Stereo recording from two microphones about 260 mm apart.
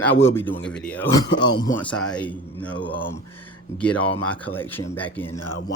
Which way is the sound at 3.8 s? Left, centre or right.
Centre.